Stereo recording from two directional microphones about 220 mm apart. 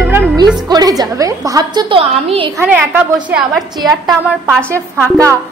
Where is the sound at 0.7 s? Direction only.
15° right (ahead or behind).